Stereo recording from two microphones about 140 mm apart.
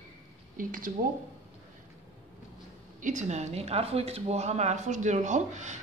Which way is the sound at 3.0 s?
60° right (ahead or behind).